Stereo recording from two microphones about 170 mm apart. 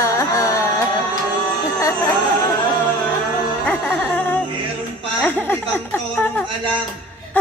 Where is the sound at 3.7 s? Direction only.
10° left (ahead or behind).